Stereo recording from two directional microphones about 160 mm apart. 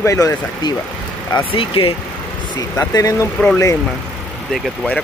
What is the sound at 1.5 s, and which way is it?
Speech, 35° left (ahead or behind).